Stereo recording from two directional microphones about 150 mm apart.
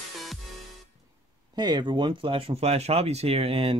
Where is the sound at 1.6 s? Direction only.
30° right (ahead or behind).